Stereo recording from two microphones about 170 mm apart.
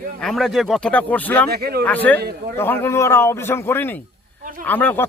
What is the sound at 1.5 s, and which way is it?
Speech, 65° right (ahead or behind).